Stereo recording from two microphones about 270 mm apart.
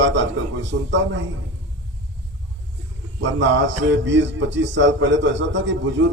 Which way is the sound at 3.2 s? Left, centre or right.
Right.